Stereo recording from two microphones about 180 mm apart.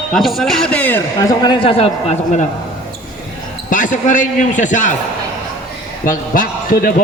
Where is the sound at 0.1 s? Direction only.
Centre (ahead or behind); by 2.5 s 40° left (ahead or behind).